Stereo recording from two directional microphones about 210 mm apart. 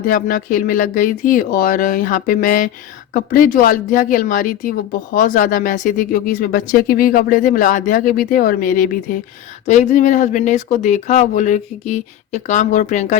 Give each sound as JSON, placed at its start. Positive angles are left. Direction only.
{"t": 0.1, "sound": "speech", "side_deg": 40}